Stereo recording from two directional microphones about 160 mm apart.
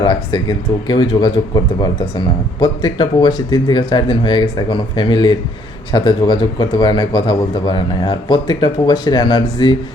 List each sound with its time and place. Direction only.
0.0 s speech: 25° left (ahead or behind)